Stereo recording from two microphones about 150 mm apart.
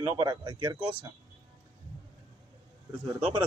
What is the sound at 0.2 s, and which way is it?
Speech, 25° right (ahead or behind).